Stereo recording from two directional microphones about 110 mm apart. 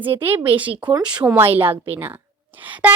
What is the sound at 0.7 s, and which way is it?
Speech, 45° right (ahead or behind).